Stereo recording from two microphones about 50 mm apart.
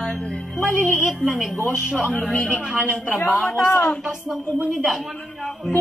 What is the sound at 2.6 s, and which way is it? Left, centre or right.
Speech, centre.